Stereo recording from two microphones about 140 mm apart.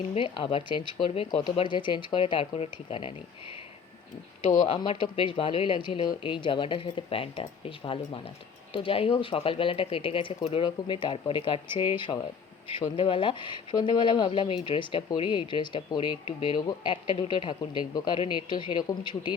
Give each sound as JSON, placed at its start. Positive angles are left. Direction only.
{"t": 0.1, "sound": "speech", "side_deg": 35}
{"t": 4.4, "sound": "speech", "side_deg": 60}
{"t": 4.7, "sound": "speech", "side_deg": 35}
{"t": 8.7, "sound": "speech", "side_deg": 40}